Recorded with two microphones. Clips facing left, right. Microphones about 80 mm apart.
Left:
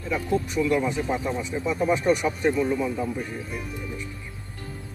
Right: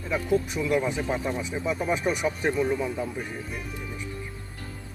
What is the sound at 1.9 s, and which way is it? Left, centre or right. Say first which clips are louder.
Speech: left 5 dB; centre.